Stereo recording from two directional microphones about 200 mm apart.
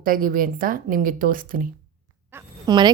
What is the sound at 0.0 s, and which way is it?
A woman's voice, 45° right (ahead or behind).